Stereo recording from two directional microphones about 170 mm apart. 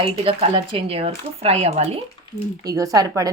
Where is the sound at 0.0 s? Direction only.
30° right (ahead or behind).